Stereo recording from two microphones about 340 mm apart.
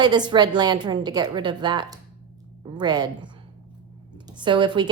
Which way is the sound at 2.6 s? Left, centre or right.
Centre.